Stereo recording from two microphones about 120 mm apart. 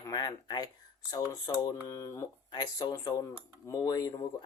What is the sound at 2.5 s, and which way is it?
Speech, 35° left (ahead or behind).